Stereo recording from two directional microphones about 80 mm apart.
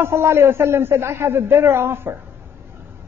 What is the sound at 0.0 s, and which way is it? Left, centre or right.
A woman's voice, right.